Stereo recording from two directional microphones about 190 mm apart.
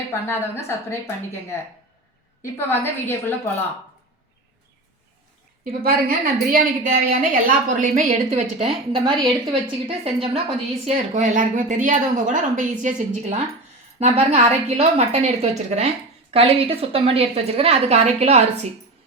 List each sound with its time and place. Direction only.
0.1 s a woman's voice: 15° left (ahead or behind)
5.6 s a woman's voice: 50° right (ahead or behind)
8.3 s a woman's voice: 30° right (ahead or behind)
10.8 s a woman's voice: 40° right (ahead or behind)